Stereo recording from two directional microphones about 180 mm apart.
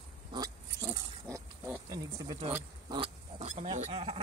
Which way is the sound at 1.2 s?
15° right (ahead or behind).